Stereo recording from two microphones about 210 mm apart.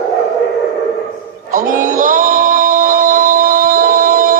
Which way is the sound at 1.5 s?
40° right (ahead or behind).